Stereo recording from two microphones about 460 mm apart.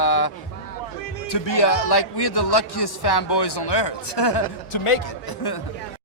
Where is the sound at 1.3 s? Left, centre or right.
Left.